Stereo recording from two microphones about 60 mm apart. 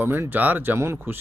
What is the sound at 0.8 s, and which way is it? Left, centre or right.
Speech, right.